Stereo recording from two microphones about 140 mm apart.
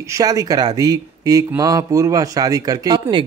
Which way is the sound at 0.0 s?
25° right (ahead or behind).